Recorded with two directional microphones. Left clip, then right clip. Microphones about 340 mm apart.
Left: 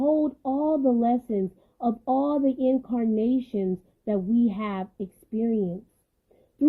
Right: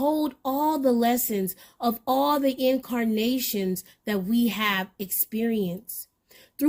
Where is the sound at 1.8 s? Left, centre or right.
Right.